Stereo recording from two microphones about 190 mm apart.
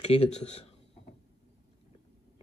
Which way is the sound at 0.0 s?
35° left (ahead or behind).